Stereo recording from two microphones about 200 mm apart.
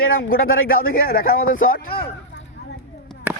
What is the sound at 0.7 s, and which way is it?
Speech, 45° left (ahead or behind).